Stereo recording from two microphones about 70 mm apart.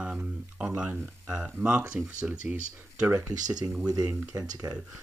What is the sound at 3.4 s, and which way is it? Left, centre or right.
Speech, right.